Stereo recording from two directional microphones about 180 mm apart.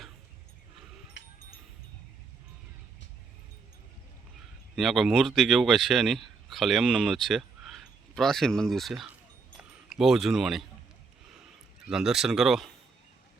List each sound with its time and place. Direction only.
1.2 s a sound: 80° left
4.7 s a man's voice: centre (ahead or behind)
11.9 s speech: 5° right (ahead or behind)